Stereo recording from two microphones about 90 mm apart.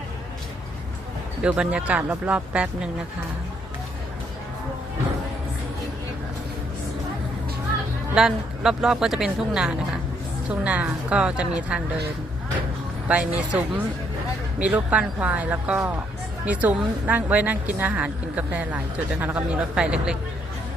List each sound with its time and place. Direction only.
1.4 s a woman's voice: 10° right (ahead or behind)
8.1 s a woman's voice: 5° right (ahead or behind)
13.1 s a woman's voice: 15° right (ahead or behind)